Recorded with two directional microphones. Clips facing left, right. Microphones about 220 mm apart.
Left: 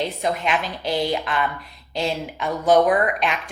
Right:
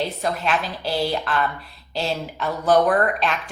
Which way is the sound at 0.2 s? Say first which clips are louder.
Left 1 dB; 15° left (ahead or behind).